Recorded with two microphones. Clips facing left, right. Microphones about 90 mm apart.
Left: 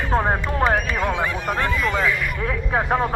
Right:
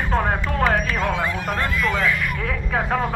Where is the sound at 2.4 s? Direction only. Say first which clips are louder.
Left 4 dB; 30° left (ahead or behind).